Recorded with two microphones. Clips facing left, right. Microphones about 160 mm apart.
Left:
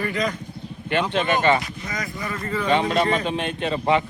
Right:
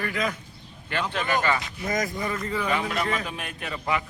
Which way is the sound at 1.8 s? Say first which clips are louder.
Right 4 dB; 45° right (ahead or behind).